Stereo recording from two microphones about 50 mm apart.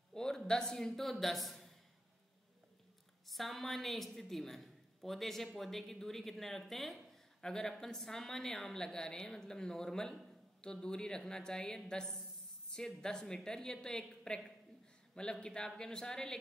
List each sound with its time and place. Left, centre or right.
0.1 s a man's voice: centre
3.3 s a woman's voice: centre